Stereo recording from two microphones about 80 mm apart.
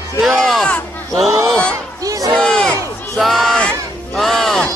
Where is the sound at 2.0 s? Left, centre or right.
Right.